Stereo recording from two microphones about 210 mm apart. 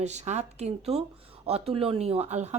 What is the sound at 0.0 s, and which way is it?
A woman's voice, 35° right (ahead or behind).